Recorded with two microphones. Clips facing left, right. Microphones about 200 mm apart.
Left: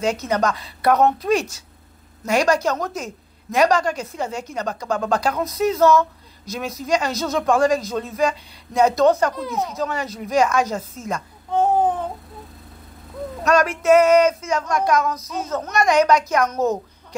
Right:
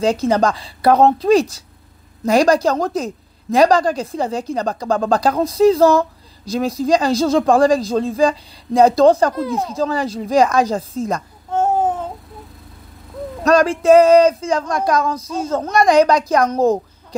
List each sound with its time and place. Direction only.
0.0 s a woman's voice: 30° right (ahead or behind)
13.4 s a woman's voice: 35° right (ahead or behind)